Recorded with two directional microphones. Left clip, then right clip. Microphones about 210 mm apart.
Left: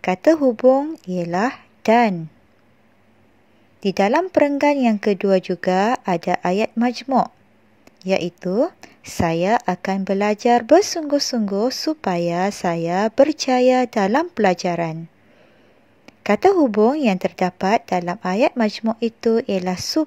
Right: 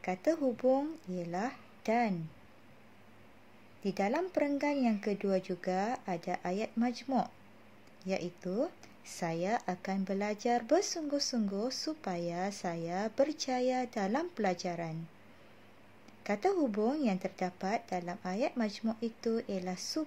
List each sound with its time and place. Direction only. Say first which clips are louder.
0.0 s speech: left 16 dB; 35° left (ahead or behind)
3.8 s speech: left 15 dB; 35° left (ahead or behind)
16.1 s speech: left 16 dB; 35° left (ahead or behind)